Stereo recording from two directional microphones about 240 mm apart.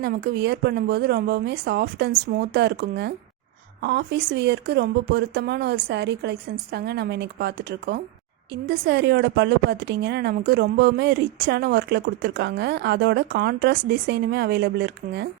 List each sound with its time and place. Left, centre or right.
0.0 s a woman's voice: right